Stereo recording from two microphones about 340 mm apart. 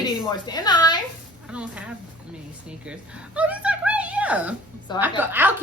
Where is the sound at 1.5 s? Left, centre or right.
Centre.